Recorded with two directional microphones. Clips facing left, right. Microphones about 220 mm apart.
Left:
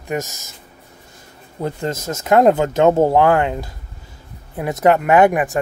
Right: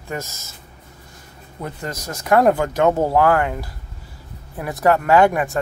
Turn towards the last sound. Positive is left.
turn(degrees=15)  # may be behind; listen again after turning